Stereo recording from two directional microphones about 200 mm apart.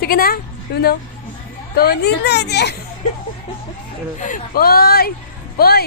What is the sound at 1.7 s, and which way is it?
Speech, 50° left (ahead or behind).